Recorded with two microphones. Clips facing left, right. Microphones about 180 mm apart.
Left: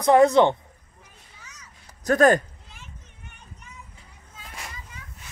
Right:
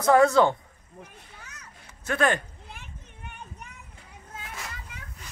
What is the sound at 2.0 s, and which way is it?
Speech, 40° left (ahead or behind).